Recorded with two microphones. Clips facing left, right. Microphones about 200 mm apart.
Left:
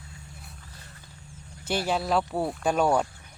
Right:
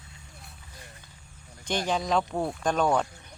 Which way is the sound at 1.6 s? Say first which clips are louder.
Left 1 dB; 5° left (ahead or behind).